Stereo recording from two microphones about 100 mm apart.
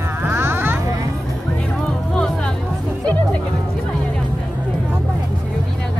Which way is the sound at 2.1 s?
10° left (ahead or behind).